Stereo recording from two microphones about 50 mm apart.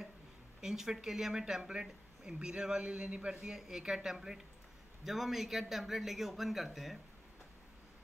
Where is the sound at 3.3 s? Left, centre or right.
Centre.